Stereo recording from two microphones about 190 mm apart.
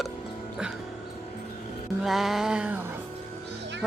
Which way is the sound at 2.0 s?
Centre (ahead or behind).